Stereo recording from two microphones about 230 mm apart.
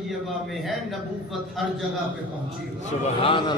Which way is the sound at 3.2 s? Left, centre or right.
Left.